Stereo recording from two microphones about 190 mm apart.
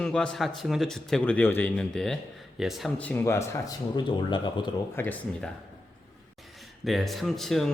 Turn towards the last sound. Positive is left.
turn(degrees=0)  # may be behind; listen again after turning